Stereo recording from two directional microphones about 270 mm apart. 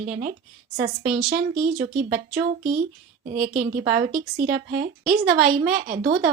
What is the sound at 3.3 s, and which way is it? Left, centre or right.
Speech, right.